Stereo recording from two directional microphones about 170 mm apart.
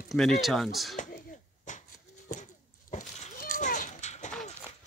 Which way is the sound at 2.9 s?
45° left (ahead or behind).